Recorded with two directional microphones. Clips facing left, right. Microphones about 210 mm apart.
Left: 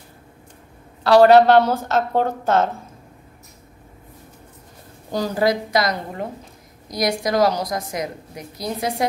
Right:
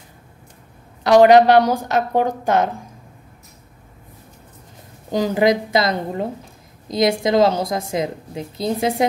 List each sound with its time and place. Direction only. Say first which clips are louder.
1.0 s a woman's voice: right 1 dB; 15° right (ahead or behind)
5.1 s a woman's voice: right 3 dB; 20° right (ahead or behind)